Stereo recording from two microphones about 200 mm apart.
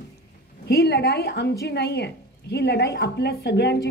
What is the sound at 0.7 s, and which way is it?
A woman's voice, 55° left (ahead or behind).